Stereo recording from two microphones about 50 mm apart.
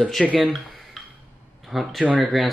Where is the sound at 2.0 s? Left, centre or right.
Right.